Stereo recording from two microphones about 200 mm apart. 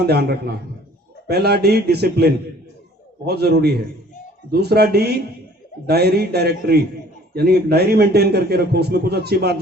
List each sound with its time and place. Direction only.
0.0 s a man's voice: 55° right (ahead or behind)